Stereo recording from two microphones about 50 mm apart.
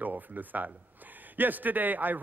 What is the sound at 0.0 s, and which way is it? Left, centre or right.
A man's voice, right.